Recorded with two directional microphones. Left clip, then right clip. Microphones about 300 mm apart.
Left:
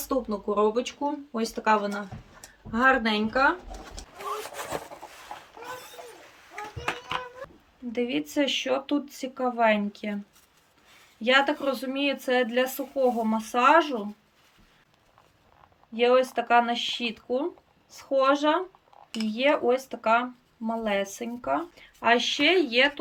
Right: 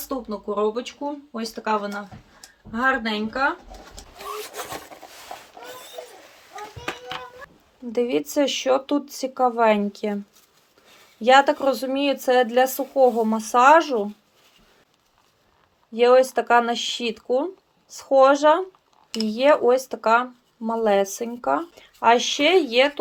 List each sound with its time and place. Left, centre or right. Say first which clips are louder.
0.0 s speech: left 1 dB; centre
7.9 s speech: right 6 dB; centre
11.2 s speech: right 7 dB; centre
16.0 s speech: right 6 dB; centre